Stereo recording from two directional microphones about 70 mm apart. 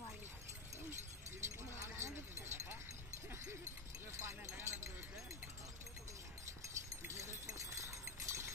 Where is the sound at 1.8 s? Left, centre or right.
Right.